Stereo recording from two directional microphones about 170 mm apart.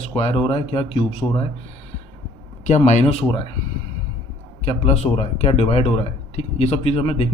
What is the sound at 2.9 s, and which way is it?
Speech, 40° left (ahead or behind).